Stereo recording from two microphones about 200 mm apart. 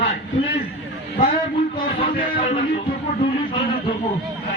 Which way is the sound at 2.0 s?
25° left (ahead or behind).